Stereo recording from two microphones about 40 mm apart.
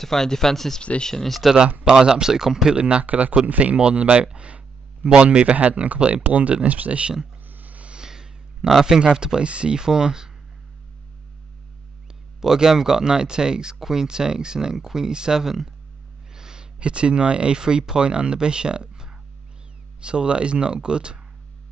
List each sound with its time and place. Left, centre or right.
0.0 s speech: centre
1.9 s speech: centre
2.7 s speech: right
3.1 s speech: right
5.9 s speech: right
6.2 s speech: right
7.4 s a sound: right
7.8 s a sound: right
8.5 s a man's voice: centre
9.0 s speech: centre
12.4 s speech: centre
16.3 s a sound: centre
16.8 s speech: right